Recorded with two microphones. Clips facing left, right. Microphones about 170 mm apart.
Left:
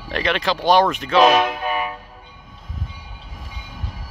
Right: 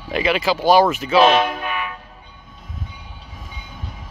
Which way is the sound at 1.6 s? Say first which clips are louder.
Left 3 dB; 35° left (ahead or behind).